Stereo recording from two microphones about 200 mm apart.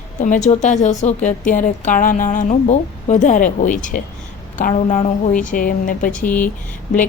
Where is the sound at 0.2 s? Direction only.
35° left (ahead or behind).